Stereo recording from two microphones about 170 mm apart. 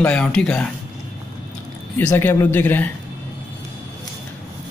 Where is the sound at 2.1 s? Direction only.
15° left (ahead or behind).